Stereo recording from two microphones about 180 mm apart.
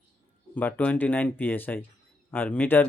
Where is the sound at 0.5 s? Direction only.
10° left (ahead or behind).